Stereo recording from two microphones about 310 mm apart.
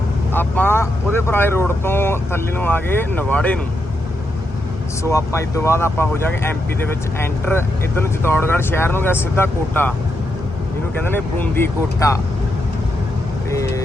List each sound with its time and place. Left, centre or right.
0.3 s speech: centre
5.0 s speech: centre
11.0 s speech: centre
13.5 s vehicle: centre